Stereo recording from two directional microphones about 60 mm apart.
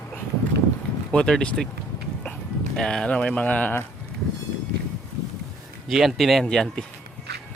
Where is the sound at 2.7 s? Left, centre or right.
Centre.